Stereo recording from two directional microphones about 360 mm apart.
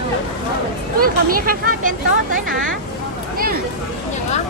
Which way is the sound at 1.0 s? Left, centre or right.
Right.